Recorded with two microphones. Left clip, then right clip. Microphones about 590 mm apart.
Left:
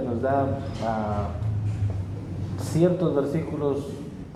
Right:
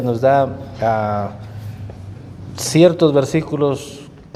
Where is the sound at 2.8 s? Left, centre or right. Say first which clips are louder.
Right 11 dB; right.